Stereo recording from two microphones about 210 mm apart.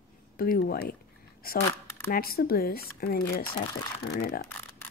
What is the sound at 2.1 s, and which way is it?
Speech, 45° left (ahead or behind).